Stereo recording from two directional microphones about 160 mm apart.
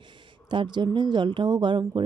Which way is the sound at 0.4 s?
30° right (ahead or behind).